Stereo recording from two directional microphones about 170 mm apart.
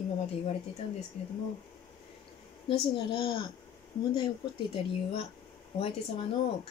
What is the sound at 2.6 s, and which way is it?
Speech, 30° left (ahead or behind).